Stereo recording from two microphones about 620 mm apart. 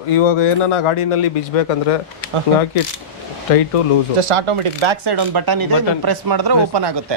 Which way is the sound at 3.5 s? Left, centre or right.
Left.